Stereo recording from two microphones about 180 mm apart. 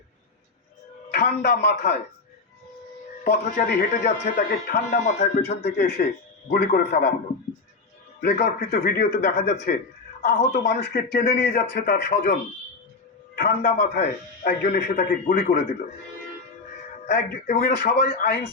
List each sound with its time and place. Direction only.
1.1 s speech: 55° left (ahead or behind)
3.2 s a man's voice: 55° left (ahead or behind)
8.2 s a man's voice: 55° left (ahead or behind)
17.1 s speech: 55° left (ahead or behind)